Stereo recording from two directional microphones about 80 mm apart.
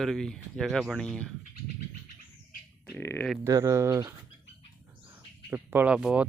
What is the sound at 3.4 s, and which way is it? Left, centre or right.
Speech, right.